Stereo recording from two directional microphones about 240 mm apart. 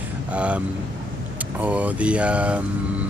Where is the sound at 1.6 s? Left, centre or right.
Centre.